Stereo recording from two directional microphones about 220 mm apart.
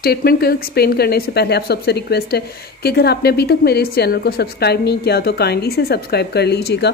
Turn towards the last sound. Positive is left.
turn(degrees=50)  # may be behind; listen again after turning